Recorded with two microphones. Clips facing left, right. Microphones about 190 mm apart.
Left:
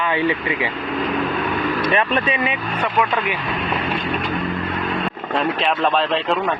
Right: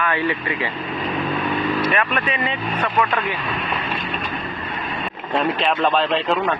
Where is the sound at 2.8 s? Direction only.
10° left (ahead or behind).